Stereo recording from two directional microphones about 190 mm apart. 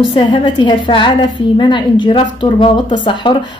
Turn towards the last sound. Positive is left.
turn(degrees=25)  # may be behind; listen again after turning